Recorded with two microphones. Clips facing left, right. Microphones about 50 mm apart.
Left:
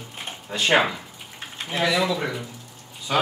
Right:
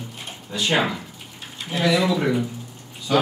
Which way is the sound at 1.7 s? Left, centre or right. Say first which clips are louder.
Right 2 dB; centre.